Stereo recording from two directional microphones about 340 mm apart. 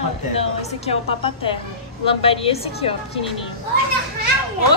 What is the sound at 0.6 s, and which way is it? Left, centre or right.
A woman's voice, centre.